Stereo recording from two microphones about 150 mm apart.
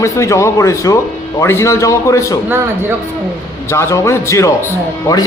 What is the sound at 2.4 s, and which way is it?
Speech, 15° right (ahead or behind).